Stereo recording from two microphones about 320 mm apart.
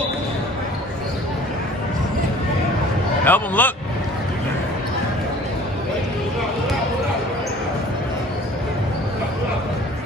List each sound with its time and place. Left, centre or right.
3.3 s a man's voice: centre